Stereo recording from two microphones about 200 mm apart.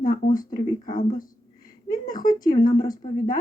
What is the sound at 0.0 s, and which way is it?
Speech, 45° left (ahead or behind).